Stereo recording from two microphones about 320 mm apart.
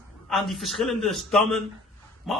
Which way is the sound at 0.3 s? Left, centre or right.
Centre.